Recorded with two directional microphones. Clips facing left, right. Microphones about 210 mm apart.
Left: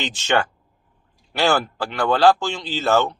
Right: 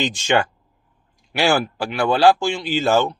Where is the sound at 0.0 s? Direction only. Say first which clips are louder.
Right 2 dB; 15° right (ahead or behind).